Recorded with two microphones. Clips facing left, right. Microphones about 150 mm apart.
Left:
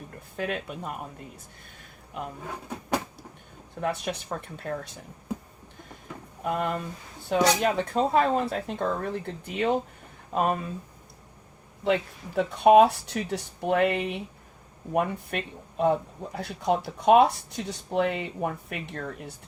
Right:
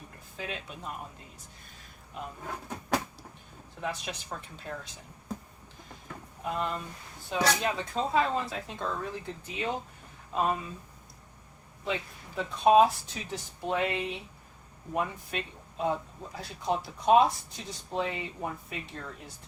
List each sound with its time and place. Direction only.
0.3 s speech: 60° left (ahead or behind)
2.5 s speech: 10° left (ahead or behind)
3.8 s speech: 55° left (ahead or behind)
6.4 s speech: 55° left (ahead or behind)
11.9 s speech: 70° left (ahead or behind)